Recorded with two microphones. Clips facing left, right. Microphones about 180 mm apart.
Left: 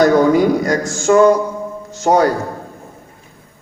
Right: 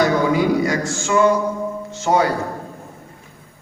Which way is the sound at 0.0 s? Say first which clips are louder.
Left 6 dB; 45° left (ahead or behind).